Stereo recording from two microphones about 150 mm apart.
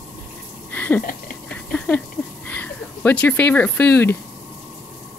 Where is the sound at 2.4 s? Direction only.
10° left (ahead or behind).